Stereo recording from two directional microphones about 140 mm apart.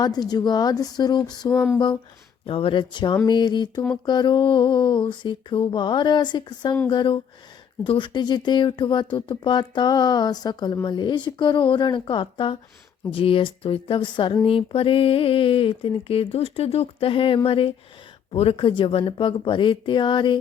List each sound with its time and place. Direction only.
0.0 s speech: 30° left (ahead or behind)
1.5 s a sound: 10° left (ahead or behind)
2.5 s speech: 40° left (ahead or behind)